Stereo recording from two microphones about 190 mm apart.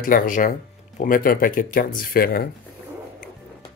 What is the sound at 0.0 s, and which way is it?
Speech, 45° left (ahead or behind).